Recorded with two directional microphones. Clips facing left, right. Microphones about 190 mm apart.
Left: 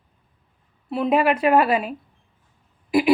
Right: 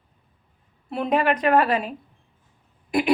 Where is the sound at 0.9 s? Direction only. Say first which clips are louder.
Left 2 dB; 5° left (ahead or behind).